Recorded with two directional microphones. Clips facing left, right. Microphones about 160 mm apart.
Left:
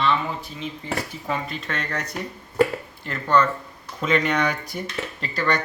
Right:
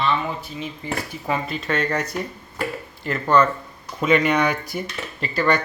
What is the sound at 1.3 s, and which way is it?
Speech, 5° right (ahead or behind).